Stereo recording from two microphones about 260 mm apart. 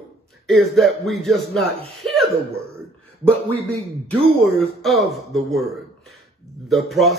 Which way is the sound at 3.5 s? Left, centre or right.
Right.